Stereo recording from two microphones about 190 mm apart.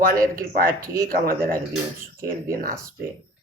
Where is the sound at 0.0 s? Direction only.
50° right (ahead or behind).